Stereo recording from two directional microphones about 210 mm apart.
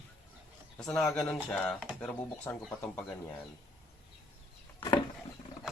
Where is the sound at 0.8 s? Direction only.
Centre (ahead or behind).